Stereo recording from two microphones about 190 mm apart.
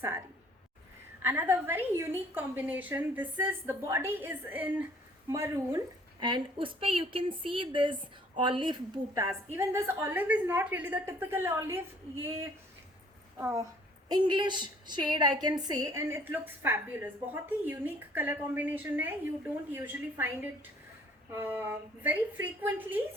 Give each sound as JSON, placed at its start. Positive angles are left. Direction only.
{"t": 0.0, "sound": "a sound", "side_deg": -15}
{"t": 1.2, "sound": "a woman's voice", "side_deg": -10}
{"t": 14.1, "sound": "a woman's voice", "side_deg": -25}